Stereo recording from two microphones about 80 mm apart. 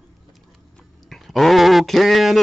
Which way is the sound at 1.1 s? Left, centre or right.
Centre.